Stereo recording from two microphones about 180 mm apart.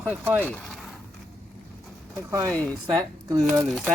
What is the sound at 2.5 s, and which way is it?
Speech, 10° left (ahead or behind).